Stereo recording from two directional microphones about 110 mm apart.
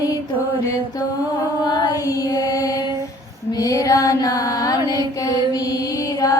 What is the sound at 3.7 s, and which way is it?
Music, 30° left (ahead or behind).